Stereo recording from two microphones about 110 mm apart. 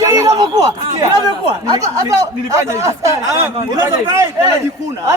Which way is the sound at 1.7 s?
30° right (ahead or behind).